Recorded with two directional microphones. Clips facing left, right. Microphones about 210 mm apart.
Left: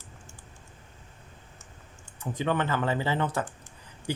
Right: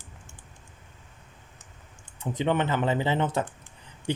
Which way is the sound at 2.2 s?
20° right (ahead or behind).